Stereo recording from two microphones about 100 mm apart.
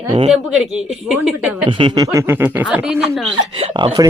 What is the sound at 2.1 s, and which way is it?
Speech, 25° right (ahead or behind).